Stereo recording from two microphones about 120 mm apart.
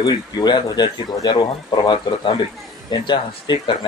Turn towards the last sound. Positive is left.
turn(degrees=40)  # may be behind; listen again after turning